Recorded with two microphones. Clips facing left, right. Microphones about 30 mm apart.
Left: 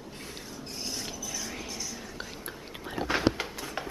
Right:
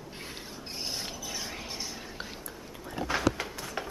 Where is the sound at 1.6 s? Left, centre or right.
Right.